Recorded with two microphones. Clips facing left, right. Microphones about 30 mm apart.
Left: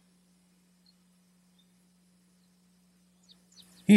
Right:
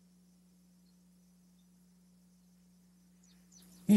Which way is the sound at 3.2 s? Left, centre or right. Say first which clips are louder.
Left 5 dB; left.